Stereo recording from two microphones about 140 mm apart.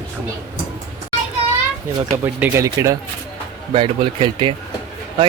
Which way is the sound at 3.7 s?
35° right (ahead or behind).